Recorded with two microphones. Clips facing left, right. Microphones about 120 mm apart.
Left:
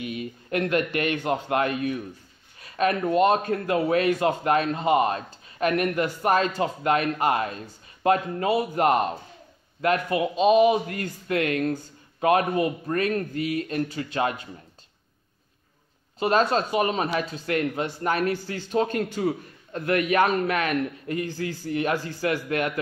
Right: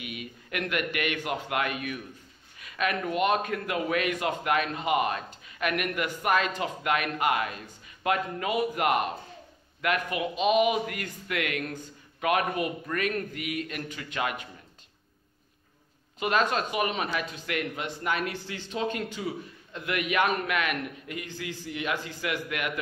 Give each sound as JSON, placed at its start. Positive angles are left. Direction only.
{"t": 0.0, "sound": "speech", "side_deg": 35}
{"t": 16.2, "sound": "speech", "side_deg": 35}